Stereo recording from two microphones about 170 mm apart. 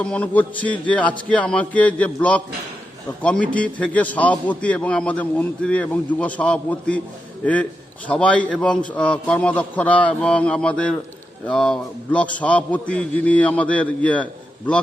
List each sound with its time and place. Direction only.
0.0 s a man's voice: 5° left (ahead or behind)